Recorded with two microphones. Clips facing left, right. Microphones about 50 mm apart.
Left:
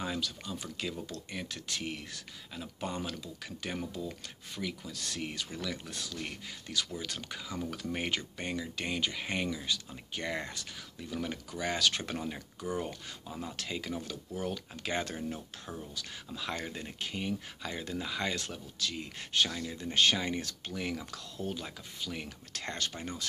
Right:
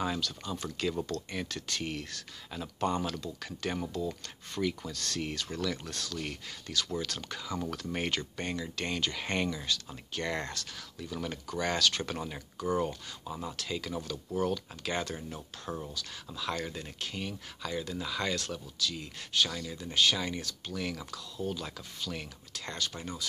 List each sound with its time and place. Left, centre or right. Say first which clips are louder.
0.8 s speech: right 8 dB; centre
9.7 s speech: right 1 dB; centre
10.6 s speech: right 2 dB; centre
11.8 s speech: right 1 dB; left
13.3 s speech: right 2 dB; centre
13.6 s speech: right 1 dB; left
19.5 s speech: even; centre
19.8 s speech: even; left
21.6 s speech: right 1 dB; centre
22.5 s speech: even; left